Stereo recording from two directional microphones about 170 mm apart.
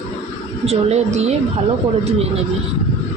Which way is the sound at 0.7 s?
40° right (ahead or behind).